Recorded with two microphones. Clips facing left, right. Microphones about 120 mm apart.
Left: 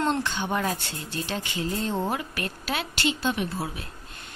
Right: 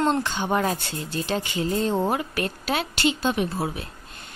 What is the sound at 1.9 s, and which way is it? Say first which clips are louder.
Speech: right 4 dB; 20° right (ahead or behind).